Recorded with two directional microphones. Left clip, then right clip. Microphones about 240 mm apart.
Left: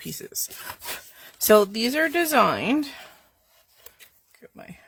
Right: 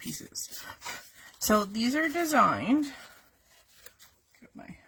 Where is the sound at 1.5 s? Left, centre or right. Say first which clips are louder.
Left 9 dB; left.